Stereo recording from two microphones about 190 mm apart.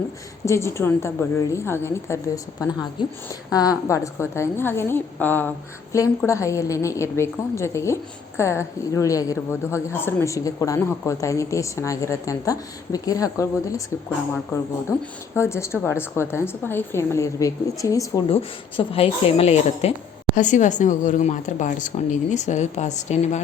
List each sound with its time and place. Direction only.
0.4 s a woman's voice: 15° left (ahead or behind)
15.4 s a woman's voice: 15° left (ahead or behind)
18.3 s a woman's voice: 30° left (ahead or behind)